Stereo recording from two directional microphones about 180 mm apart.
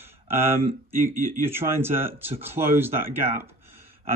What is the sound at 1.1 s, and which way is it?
Speech, 50° right (ahead or behind).